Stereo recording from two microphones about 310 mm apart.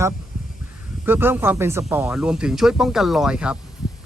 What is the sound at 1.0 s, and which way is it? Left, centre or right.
Speech, centre.